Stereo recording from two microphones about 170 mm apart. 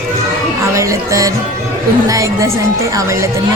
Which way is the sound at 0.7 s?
20° right (ahead or behind).